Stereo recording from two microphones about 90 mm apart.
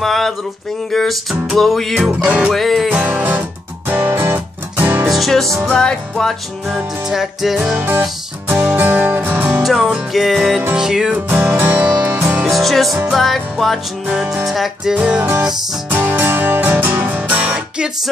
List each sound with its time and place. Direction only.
0.0 s music: 5° left (ahead or behind)
2.2 s music: 15° right (ahead or behind)
2.5 s music: centre (ahead or behind)
2.9 s music: 15° right (ahead or behind)
5.1 s music: centre (ahead or behind)
6.7 s music: 5° right (ahead or behind)
7.7 s music: 20° right (ahead or behind)
9.6 s music: centre (ahead or behind)
11.1 s music: 20° right (ahead or behind)
12.4 s music: centre (ahead or behind)
14.0 s music: 10° right (ahead or behind)
15.0 s music: 15° right (ahead or behind)